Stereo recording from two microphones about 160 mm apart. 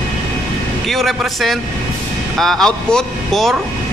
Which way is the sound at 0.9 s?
Centre (ahead or behind).